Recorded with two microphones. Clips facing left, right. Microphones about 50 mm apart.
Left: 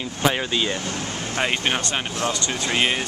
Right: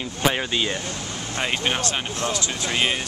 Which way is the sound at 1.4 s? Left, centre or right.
Centre.